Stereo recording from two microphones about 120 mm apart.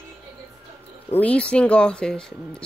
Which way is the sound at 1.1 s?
10° left (ahead or behind).